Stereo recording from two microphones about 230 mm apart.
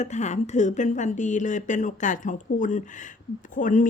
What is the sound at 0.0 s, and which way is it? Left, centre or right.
Speech, left.